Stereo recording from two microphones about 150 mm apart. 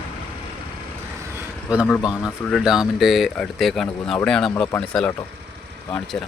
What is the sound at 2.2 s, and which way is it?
Speech, centre (ahead or behind).